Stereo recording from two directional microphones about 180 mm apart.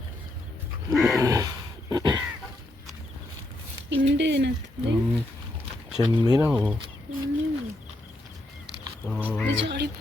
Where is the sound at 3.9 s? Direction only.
80° right.